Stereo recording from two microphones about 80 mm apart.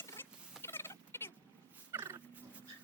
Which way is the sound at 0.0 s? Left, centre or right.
Left.